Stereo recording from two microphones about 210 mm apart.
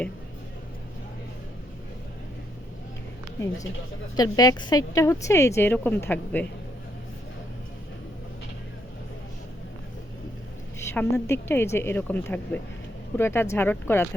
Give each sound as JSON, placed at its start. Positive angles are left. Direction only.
{"t": 4.2, "sound": "a woman's voice", "side_deg": 20}
{"t": 10.8, "sound": "a woman's voice", "side_deg": 10}